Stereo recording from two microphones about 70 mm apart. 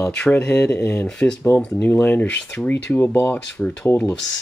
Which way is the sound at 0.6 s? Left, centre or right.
Left.